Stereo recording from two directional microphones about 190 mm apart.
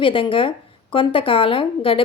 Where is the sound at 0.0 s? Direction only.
25° left (ahead or behind).